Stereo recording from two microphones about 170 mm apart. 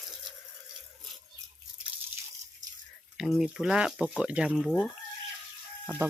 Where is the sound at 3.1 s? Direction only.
Centre (ahead or behind).